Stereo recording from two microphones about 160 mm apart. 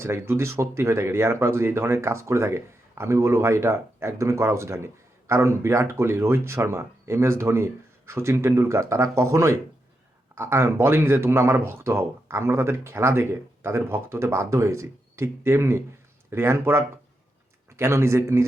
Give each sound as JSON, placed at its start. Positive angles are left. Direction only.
{"t": 0.0, "sound": "speech", "side_deg": -15}